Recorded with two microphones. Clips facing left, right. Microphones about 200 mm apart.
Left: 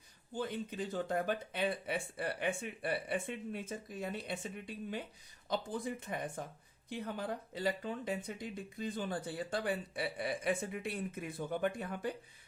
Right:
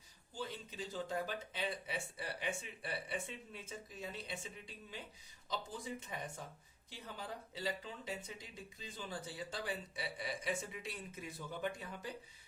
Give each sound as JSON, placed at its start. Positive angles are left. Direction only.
{"t": 0.3, "sound": "speech", "side_deg": 55}